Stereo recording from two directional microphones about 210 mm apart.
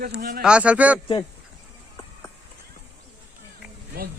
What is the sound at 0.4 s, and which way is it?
Speech, 5° right (ahead or behind).